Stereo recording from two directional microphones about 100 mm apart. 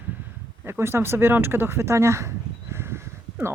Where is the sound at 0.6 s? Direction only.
25° right (ahead or behind).